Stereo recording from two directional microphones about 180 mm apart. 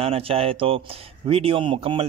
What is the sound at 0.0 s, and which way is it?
Speech, 30° right (ahead or behind).